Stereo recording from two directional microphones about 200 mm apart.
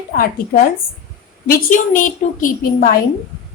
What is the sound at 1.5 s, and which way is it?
A woman's voice, 40° left (ahead or behind).